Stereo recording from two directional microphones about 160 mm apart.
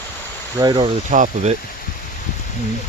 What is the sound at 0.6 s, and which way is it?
Speech, 25° right (ahead or behind).